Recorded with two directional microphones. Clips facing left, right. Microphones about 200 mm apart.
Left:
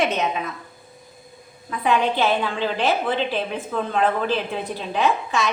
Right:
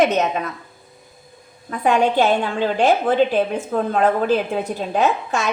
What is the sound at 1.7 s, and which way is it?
A woman's voice, 45° right (ahead or behind).